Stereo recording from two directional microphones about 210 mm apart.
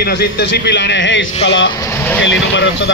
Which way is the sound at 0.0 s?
50° left (ahead or behind).